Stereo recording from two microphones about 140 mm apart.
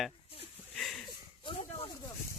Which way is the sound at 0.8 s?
5° left (ahead or behind).